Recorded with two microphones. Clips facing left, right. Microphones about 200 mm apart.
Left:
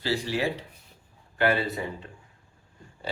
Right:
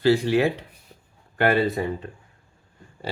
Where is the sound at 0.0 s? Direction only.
60° right (ahead or behind).